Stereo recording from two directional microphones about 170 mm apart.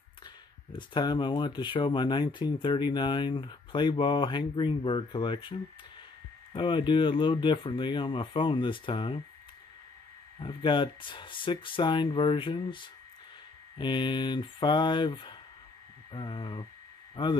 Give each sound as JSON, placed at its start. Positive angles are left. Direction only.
{"t": 0.7, "sound": "speech", "side_deg": 25}
{"t": 10.4, "sound": "speech", "side_deg": 30}